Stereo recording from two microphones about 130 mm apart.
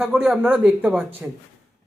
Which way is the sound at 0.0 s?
5° right (ahead or behind).